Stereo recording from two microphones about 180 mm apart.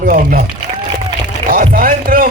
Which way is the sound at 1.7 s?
55° right (ahead or behind).